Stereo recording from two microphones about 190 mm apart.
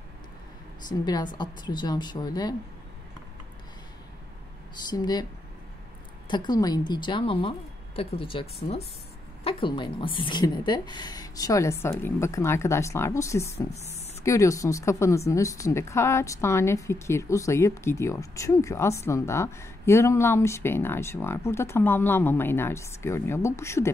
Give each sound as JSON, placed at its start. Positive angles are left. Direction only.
{"t": 0.8, "sound": "a woman's voice", "side_deg": 20}
{"t": 4.8, "sound": "a woman's voice", "side_deg": 20}
{"t": 6.2, "sound": "a woman's voice", "side_deg": 25}